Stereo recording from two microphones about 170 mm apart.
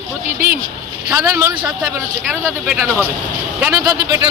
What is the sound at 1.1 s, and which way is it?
Speech, 20° right (ahead or behind).